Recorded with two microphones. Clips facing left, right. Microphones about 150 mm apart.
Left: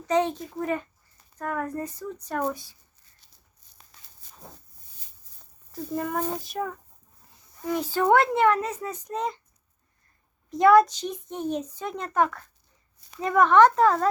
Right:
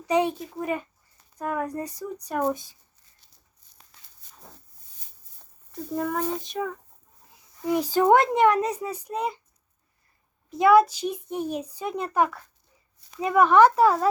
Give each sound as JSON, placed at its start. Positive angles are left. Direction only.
{"t": 0.1, "sound": "a child's voice", "side_deg": -10}
{"t": 5.7, "sound": "speech", "side_deg": 0}
{"t": 7.9, "sound": "a child's voice", "side_deg": -15}
{"t": 10.5, "sound": "a child's voice", "side_deg": -5}